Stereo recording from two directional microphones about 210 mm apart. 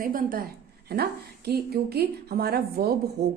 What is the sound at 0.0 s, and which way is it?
A woman's voice, 40° right (ahead or behind).